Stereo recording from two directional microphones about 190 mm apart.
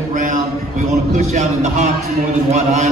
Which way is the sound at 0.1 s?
45° right (ahead or behind).